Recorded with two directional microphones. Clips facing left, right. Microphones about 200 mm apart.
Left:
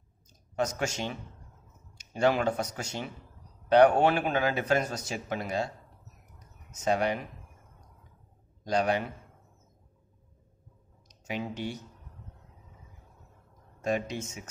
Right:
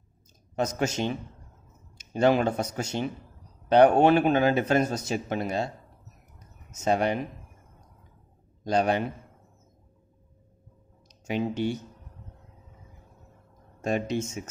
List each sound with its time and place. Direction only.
0.8 s a man's voice: 20° right (ahead or behind)
6.7 s a man's voice: 25° right (ahead or behind)
8.6 s a man's voice: 25° right (ahead or behind)
11.1 s speech: 25° right (ahead or behind)
13.7 s speech: 25° right (ahead or behind)